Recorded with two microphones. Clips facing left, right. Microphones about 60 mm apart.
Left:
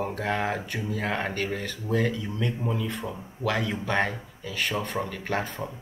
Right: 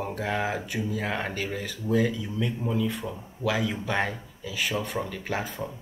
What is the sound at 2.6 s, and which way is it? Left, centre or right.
Speech, centre.